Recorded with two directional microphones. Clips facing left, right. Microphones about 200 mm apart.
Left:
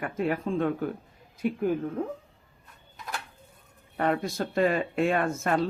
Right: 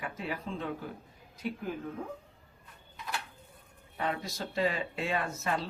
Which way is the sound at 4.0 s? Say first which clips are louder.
Left 8 dB; 55° left (ahead or behind).